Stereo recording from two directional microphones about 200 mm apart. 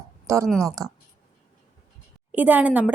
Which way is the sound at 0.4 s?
Centre (ahead or behind).